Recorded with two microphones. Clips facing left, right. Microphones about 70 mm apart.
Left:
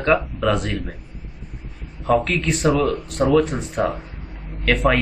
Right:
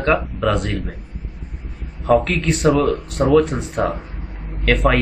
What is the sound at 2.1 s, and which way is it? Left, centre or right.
A man's voice, centre.